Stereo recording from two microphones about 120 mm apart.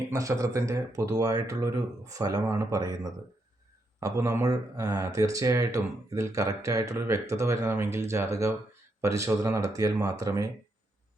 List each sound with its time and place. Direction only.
0.1 s speech: 25° right (ahead or behind)